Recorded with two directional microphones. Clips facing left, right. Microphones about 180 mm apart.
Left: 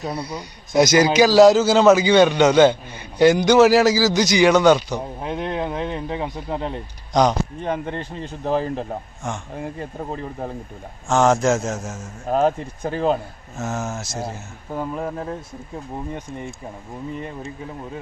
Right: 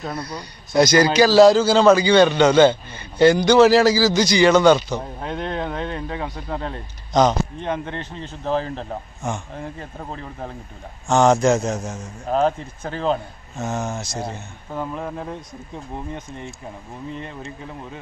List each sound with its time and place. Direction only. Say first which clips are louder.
0.0 s speech: left 2 dB; 10° left (ahead or behind)
0.4 s a man's voice: even; 20° left (ahead or behind); by 3.9 s 5° left (ahead or behind)
3.9 s speech: even; 15° left (ahead or behind)
4.6 s a man's voice: even; centre (ahead or behind)
4.9 s speech: left 1 dB; 15° left (ahead or behind)
9.2 s a man's voice: right 2 dB; centre (ahead or behind)
9.8 s speech: left 4 dB; 15° left (ahead or behind)
11.1 s a man's voice: right 1 dB; centre (ahead or behind)